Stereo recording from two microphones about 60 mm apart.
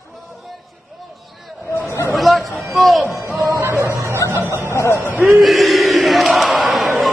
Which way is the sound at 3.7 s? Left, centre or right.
Right.